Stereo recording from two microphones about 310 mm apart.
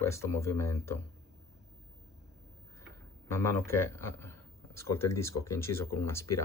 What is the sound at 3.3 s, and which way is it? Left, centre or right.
Speech, centre.